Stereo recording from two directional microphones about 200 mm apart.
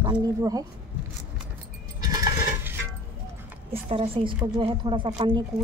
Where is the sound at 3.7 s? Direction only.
30° right (ahead or behind).